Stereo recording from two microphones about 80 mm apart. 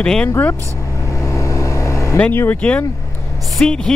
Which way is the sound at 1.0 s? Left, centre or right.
Left.